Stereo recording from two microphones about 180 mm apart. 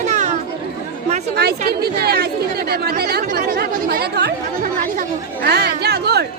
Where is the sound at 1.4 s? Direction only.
60° right (ahead or behind).